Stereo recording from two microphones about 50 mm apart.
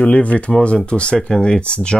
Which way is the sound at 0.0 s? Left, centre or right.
Left.